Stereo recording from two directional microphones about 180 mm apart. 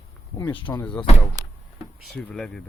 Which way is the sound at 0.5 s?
25° left (ahead or behind).